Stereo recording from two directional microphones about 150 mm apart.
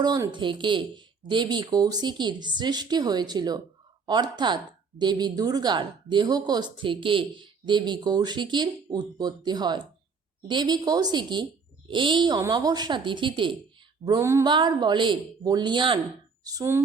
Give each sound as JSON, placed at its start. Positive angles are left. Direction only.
{"t": 0.0, "sound": "a woman's voice", "side_deg": -25}
{"t": 14.0, "sound": "a woman's voice", "side_deg": -25}
{"t": 14.4, "sound": "a woman's voice", "side_deg": -30}